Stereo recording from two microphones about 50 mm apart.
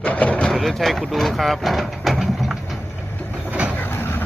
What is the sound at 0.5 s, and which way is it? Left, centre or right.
Speech, centre.